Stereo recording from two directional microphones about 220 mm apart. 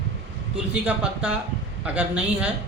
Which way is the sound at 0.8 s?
5° right (ahead or behind).